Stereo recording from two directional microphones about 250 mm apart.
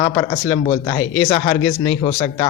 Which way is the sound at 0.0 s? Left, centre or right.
Centre.